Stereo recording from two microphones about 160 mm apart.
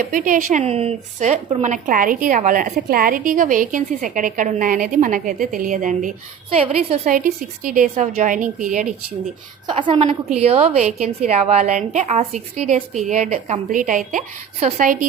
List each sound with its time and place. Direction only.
0.0 s a woman's voice: 55° right (ahead or behind)
6.6 s a woman's voice: 40° right (ahead or behind)
7.1 s a woman's voice: 60° right (ahead or behind)
9.6 s a woman's voice: 30° right (ahead or behind); by 14.9 s 55° right (ahead or behind)